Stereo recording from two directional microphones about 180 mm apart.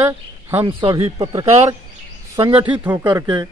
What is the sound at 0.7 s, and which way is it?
Speech, 30° right (ahead or behind).